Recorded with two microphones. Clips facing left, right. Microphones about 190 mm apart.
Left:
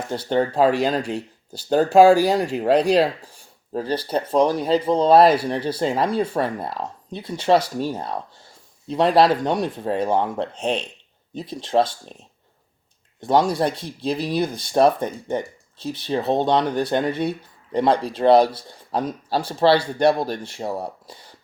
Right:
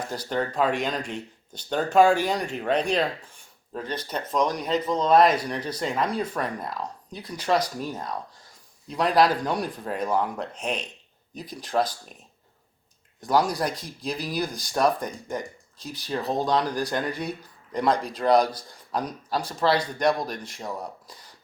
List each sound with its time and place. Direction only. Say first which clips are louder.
0.1 s speech: left 9 dB; 30° left (ahead or behind)
13.2 s speech: left 5 dB; 25° left (ahead or behind)